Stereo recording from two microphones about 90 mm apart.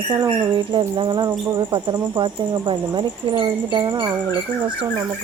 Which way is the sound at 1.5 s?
55° right (ahead or behind).